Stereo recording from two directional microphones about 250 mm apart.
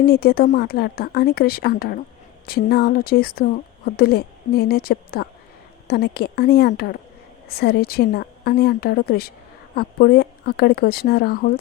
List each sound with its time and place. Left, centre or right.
0.0 s speech: left